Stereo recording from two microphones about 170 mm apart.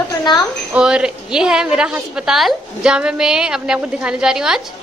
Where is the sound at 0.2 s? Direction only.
25° left (ahead or behind).